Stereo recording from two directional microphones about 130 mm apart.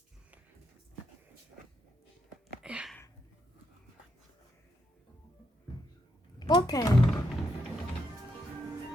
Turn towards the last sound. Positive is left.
turn(degrees=30)  # may be behind; listen again after turning